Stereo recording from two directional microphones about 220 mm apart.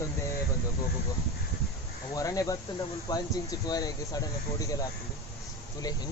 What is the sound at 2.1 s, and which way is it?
Speech, 15° left (ahead or behind).